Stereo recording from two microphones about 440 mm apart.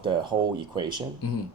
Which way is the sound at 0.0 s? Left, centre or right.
Centre.